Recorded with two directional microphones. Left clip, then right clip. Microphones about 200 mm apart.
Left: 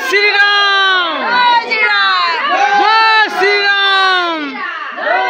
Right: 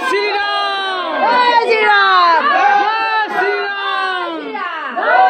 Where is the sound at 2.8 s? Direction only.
15° left (ahead or behind).